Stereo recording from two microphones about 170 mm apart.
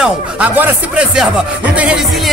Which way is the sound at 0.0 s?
5° right (ahead or behind).